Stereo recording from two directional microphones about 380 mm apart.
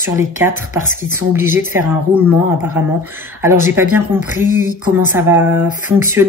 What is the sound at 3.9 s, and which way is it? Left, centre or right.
A woman's voice, centre.